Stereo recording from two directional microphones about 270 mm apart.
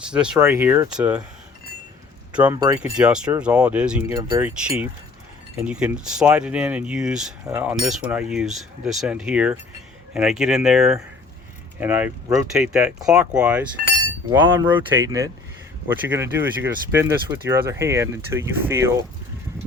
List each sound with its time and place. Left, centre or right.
0.1 s speech: centre
2.3 s speech: centre